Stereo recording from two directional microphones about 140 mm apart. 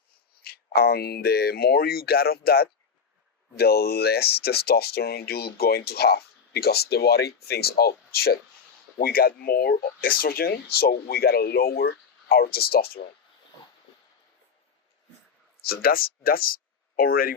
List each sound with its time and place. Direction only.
0.4 s speech: 90° left
3.7 s speech: 90° left
15.6 s speech: 90° left